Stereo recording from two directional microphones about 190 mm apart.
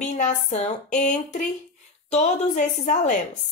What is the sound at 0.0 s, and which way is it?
A woman's voice, 40° left (ahead or behind).